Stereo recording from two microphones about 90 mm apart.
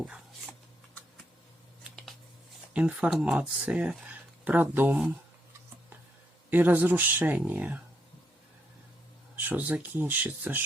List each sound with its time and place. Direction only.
2.7 s speech: 15° right (ahead or behind)
6.5 s speech: 20° right (ahead or behind)
9.3 s speech: 20° right (ahead or behind)